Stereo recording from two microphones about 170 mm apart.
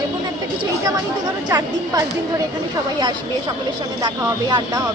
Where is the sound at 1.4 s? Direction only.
20° right (ahead or behind).